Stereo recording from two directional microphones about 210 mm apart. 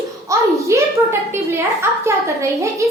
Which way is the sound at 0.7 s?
15° right (ahead or behind).